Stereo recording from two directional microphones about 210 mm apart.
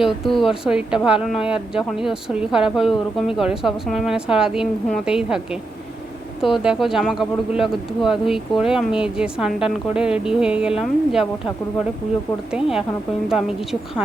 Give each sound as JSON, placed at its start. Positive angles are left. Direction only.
{"t": 0.0, "sound": "a woman's voice", "side_deg": 0}
{"t": 6.4, "sound": "a woman's voice", "side_deg": 0}
{"t": 12.5, "sound": "a woman's voice", "side_deg": -5}